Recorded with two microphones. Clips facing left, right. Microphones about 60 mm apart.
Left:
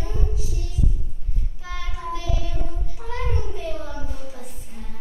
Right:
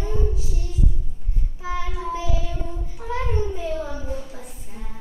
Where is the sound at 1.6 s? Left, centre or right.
Centre.